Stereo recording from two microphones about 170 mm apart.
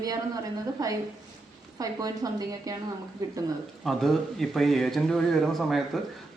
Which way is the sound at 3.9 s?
Centre (ahead or behind).